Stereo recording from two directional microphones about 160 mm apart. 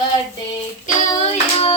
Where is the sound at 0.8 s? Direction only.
40° left (ahead or behind).